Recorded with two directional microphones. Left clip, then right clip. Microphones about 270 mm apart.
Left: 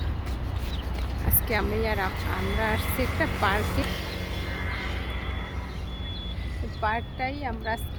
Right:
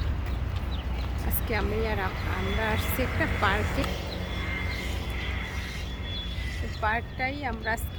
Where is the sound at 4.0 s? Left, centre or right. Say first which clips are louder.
Left 1 dB; left.